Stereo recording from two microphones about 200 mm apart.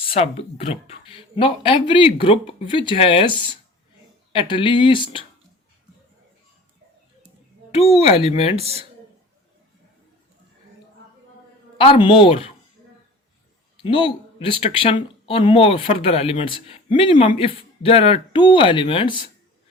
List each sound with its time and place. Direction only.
0.0 s speech: 30° left (ahead or behind)
4.3 s speech: 25° left (ahead or behind)
7.8 s speech: 30° left (ahead or behind)
8.5 s speech: 30° right (ahead or behind)
11.8 s speech: 25° left (ahead or behind)
13.8 s speech: 25° left (ahead or behind)